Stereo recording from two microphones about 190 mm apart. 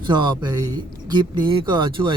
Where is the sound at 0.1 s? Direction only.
25° right (ahead or behind).